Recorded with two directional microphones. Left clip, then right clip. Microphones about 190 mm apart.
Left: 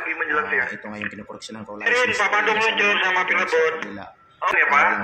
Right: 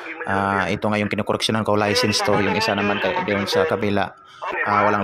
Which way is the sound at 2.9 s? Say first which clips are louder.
Left 2 dB; 15° left (ahead or behind).